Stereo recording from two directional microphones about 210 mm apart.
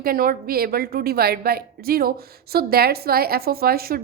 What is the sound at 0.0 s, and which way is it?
A woman's voice, 45° right (ahead or behind).